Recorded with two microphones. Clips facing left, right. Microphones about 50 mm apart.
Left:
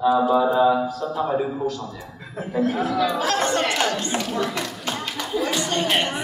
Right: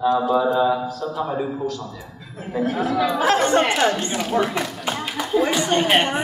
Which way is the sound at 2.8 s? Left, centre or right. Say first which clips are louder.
Right 2 dB; centre.